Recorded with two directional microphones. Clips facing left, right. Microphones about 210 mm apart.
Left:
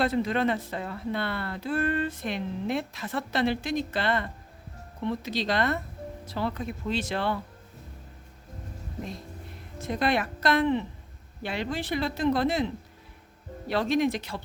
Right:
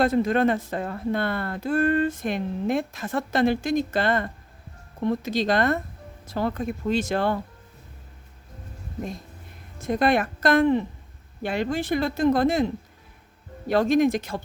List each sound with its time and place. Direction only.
0.0 s speech: 45° right (ahead or behind)
9.8 s speech: 50° right (ahead or behind)